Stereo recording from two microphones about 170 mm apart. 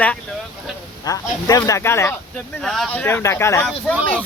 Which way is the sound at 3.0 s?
15° left (ahead or behind).